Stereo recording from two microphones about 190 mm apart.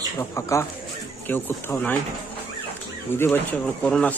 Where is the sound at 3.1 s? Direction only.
10° left (ahead or behind).